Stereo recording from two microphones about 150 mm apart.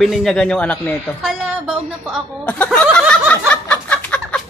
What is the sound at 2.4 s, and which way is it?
Speech, 10° left (ahead or behind).